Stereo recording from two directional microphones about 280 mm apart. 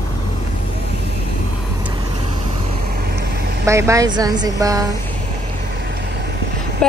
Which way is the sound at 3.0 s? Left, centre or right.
Right.